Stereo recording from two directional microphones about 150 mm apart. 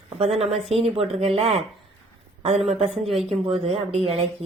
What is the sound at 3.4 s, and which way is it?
Speech, 40° right (ahead or behind).